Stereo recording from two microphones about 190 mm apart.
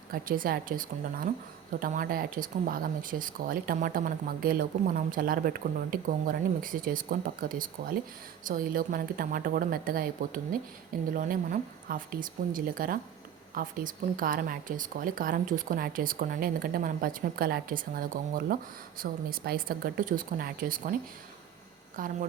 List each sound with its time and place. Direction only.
0.1 s speech: 50° right (ahead or behind)
21.9 s speech: 45° right (ahead or behind)